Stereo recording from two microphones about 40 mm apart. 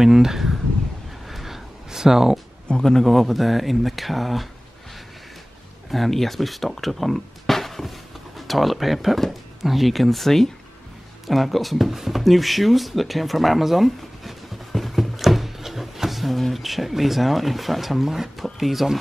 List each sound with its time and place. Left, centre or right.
0.0 s speech: centre
1.3 s a sound: centre
2.7 s a man's voice: centre
3.1 s speech: centre
5.9 s speech: centre